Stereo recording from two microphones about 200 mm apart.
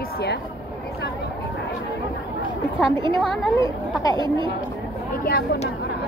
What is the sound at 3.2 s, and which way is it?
Speech, centre (ahead or behind).